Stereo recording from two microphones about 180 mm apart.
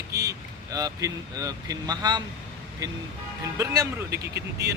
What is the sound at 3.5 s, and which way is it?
Speech, 15° right (ahead or behind).